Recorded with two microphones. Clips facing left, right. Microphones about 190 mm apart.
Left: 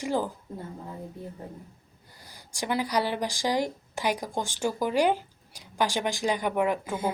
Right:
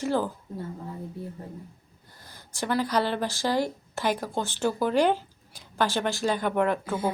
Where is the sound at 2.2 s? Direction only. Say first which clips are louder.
Right 1 dB; 15° left (ahead or behind).